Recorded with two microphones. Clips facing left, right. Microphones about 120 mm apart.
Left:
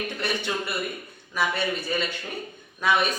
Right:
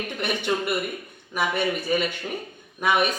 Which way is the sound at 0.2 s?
15° right (ahead or behind).